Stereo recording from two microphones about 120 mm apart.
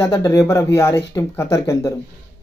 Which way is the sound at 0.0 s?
30° left (ahead or behind).